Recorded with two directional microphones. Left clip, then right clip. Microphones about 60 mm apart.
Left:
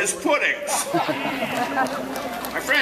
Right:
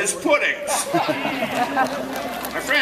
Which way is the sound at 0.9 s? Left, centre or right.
Right.